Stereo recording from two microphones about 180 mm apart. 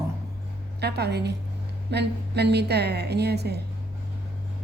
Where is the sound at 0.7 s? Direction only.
65° right (ahead or behind).